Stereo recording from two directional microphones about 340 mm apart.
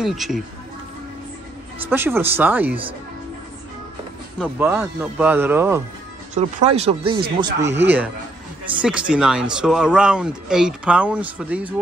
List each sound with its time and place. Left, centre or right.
0.0 s speech: centre
1.9 s speech: centre
4.4 s speech: centre
6.3 s speech: centre